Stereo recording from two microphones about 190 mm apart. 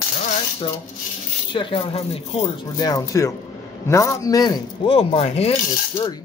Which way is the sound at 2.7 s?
20° left (ahead or behind).